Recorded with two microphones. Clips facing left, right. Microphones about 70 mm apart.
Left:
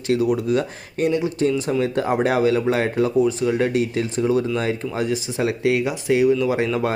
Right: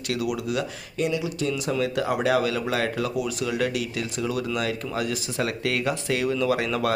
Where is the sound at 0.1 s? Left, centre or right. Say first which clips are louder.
Left 8 dB; left.